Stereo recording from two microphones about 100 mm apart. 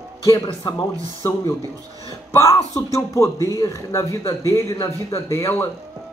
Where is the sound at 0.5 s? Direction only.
55° left (ahead or behind).